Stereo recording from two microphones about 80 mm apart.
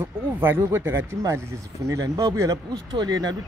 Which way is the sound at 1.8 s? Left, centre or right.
Right.